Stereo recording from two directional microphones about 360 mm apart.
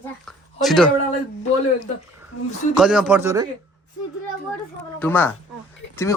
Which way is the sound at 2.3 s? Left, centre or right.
Left.